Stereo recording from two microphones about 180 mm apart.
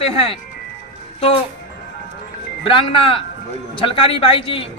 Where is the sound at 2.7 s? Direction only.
30° left (ahead or behind).